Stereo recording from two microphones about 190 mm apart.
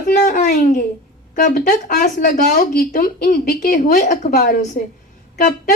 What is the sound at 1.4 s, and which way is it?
A woman's voice, 45° left (ahead or behind).